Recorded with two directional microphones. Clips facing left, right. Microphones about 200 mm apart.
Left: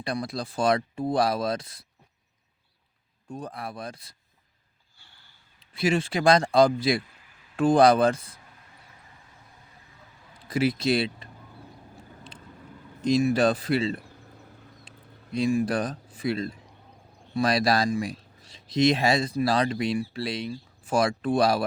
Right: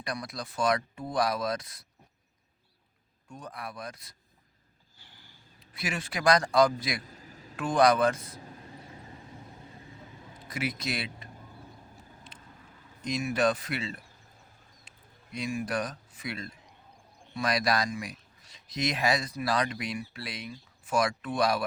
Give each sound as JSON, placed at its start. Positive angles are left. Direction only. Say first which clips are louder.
{"t": 0.0, "sound": "speech", "louder": "left 6 dB", "side_deg": 30}
{"t": 3.2, "sound": "speech", "louder": "left 6 dB", "side_deg": 30}
{"t": 5.5, "sound": "speech", "louder": "left 11 dB", "side_deg": 30}
{"t": 7.0, "sound": "a sound", "louder": "right 8 dB", "side_deg": -40}
{"t": 7.5, "sound": "speech", "louder": "left 5 dB", "side_deg": 30}
{"t": 8.4, "sound": "vehicle", "louder": "right 9 dB", "side_deg": -30}
{"t": 10.5, "sound": "speech", "louder": "left 10 dB", "side_deg": 30}
{"t": 13.0, "sound": "speech", "louder": "left 7 dB", "side_deg": 30}
{"t": 14.8, "sound": "a sound", "louder": "left 9 dB", "side_deg": 30}
{"t": 17.3, "sound": "speech", "louder": "left 5 dB", "side_deg": 30}